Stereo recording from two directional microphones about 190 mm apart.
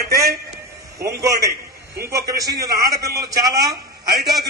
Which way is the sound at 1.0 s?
15° right (ahead or behind).